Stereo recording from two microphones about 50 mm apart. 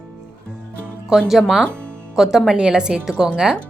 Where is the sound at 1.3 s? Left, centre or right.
Centre.